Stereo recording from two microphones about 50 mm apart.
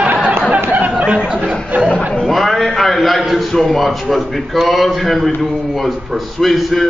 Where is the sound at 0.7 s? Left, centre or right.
Right.